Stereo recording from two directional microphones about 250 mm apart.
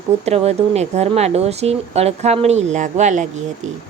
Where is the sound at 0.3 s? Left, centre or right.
Right.